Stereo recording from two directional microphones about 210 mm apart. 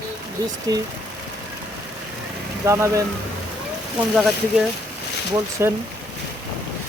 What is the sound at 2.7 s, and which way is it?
Speech, 15° right (ahead or behind).